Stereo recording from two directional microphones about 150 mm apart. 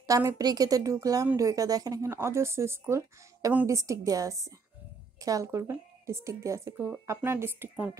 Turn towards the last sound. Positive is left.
turn(degrees=-10)  # may be behind; listen again after turning